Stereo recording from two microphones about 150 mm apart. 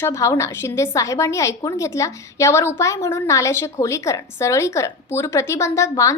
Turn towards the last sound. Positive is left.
turn(degrees=20)  # may be behind; listen again after turning